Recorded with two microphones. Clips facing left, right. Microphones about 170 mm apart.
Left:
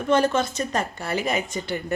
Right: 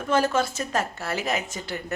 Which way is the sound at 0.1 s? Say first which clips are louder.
Left 2 dB; 5° right (ahead or behind).